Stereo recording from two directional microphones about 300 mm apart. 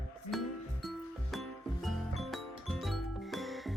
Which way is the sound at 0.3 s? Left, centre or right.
Centre.